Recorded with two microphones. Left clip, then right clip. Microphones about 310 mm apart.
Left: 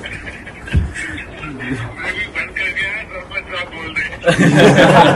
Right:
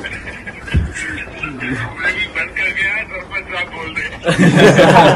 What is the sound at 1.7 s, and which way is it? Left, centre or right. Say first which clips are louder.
Vehicle: right 5 dB; centre.